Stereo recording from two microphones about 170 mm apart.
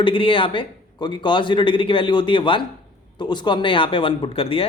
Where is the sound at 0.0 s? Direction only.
30° left (ahead or behind).